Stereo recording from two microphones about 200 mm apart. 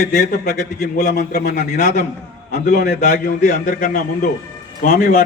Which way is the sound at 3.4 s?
40° left (ahead or behind).